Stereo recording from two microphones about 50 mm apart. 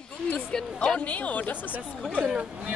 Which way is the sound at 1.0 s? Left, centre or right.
Left.